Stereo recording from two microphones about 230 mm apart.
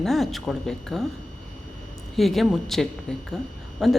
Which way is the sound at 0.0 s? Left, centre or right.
Centre.